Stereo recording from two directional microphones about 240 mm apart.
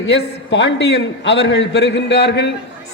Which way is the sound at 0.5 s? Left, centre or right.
Left.